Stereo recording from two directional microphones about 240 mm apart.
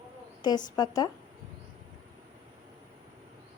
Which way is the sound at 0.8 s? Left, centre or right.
Centre.